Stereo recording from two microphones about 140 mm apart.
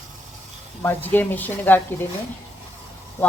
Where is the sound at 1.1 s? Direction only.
10° left (ahead or behind).